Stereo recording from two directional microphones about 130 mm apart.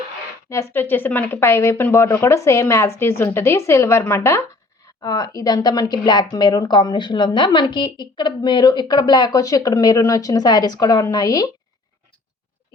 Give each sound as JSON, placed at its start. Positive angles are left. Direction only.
{"t": 0.5, "sound": "speech", "side_deg": 20}